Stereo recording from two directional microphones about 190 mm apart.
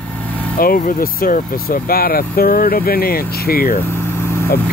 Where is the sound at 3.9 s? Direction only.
15° left (ahead or behind).